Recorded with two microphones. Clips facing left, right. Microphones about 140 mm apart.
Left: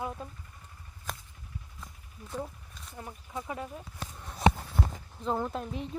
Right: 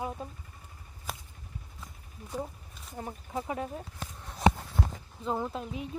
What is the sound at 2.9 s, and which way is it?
Speech, 30° right (ahead or behind).